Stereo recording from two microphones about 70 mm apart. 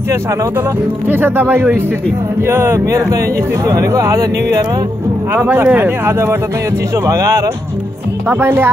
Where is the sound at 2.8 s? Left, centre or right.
Right.